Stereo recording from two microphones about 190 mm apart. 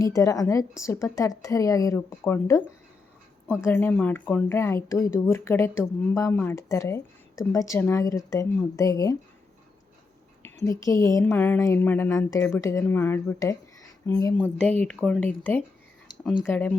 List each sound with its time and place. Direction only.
0.0 s speech: 15° left (ahead or behind)
10.4 s speech: 15° left (ahead or behind)
14.3 s speech: 10° left (ahead or behind)